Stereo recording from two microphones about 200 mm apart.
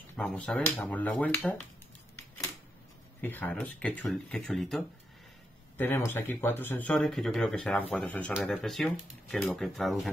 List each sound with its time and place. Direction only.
0.1 s speech: 5° left (ahead or behind)
3.2 s speech: 5° left (ahead or behind)